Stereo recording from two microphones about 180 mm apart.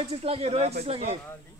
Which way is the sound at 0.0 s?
35° right (ahead or behind).